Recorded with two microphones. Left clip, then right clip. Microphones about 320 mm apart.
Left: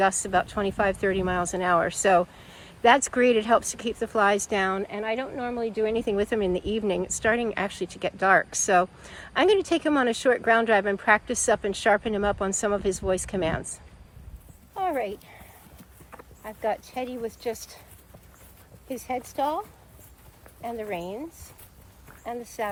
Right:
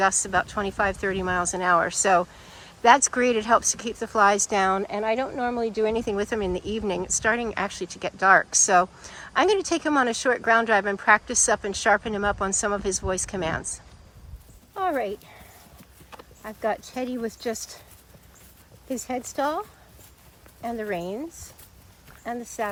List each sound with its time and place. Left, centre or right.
0.0 s speech: centre
14.8 s horse: right
16.4 s speech: right
18.9 s speech: right